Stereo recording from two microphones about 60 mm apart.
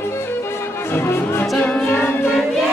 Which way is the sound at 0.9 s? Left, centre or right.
Left.